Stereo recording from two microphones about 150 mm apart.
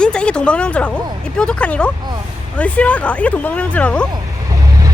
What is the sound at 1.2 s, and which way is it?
Speech, 5° left (ahead or behind).